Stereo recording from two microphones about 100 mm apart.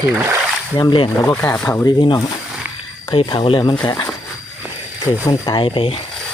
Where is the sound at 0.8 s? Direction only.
50° left (ahead or behind).